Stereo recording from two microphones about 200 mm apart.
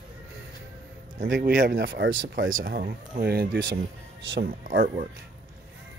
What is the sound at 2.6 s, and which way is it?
Speech, 50° right (ahead or behind).